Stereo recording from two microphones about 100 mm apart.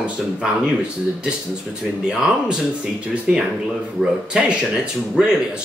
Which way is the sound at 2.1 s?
10° right (ahead or behind).